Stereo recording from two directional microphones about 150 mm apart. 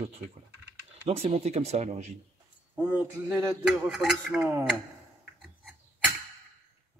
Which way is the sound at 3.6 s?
5° right (ahead or behind).